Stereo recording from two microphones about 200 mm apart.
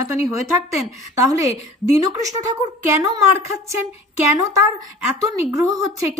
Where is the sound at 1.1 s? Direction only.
15° right (ahead or behind).